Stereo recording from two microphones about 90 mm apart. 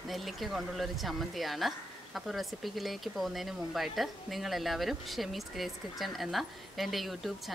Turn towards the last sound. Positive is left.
turn(degrees=0)  # may be behind; listen again after turning